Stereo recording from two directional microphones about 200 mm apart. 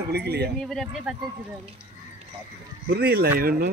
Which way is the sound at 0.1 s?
55° right (ahead or behind).